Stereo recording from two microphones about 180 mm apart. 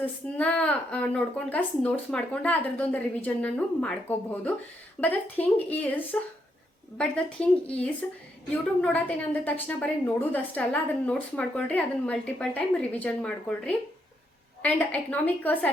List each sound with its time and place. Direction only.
0.0 s a woman's voice: 5° left (ahead or behind)